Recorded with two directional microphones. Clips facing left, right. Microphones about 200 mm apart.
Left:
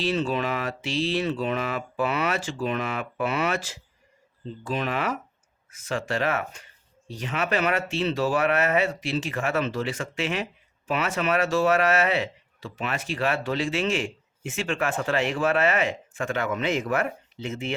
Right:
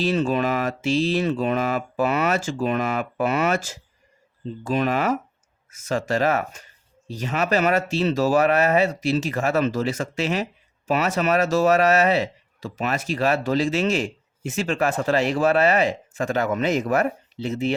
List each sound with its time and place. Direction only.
0.0 s speech: 45° right (ahead or behind)